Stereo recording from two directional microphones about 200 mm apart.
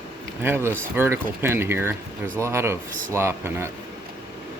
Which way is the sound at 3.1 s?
10° right (ahead or behind).